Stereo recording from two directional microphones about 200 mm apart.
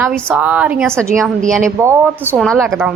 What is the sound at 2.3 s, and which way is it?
Speech, 5° left (ahead or behind).